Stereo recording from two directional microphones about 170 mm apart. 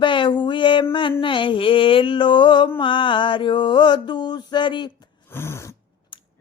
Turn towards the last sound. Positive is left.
turn(degrees=15)  # may be behind; listen again after turning